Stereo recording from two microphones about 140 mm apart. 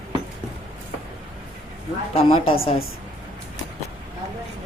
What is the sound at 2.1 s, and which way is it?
Speech, 40° left (ahead or behind).